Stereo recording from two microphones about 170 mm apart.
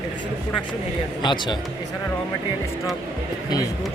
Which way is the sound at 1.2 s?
25° left (ahead or behind).